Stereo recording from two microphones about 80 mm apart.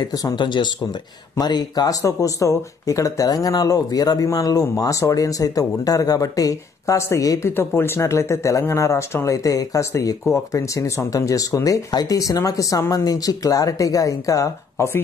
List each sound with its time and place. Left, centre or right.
0.1 s speech: left
0.4 s speech: left
1.4 s speech: left
7.0 s speech: left